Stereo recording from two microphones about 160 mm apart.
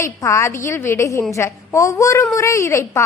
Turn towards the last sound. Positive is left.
turn(degrees=20)  # may be behind; listen again after turning